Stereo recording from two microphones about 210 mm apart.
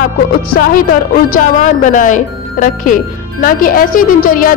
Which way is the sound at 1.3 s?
40° left (ahead or behind).